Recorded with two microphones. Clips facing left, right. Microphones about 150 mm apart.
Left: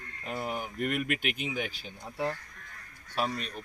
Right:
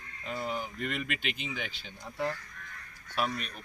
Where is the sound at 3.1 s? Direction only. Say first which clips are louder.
Left 1 dB; 35° left (ahead or behind).